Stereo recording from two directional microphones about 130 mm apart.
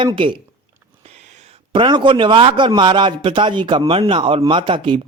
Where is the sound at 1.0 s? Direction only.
60° right (ahead or behind).